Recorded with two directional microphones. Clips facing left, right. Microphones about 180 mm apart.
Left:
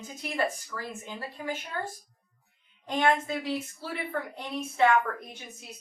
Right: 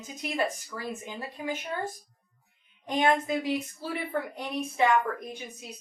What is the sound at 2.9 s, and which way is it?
Speech, 15° right (ahead or behind).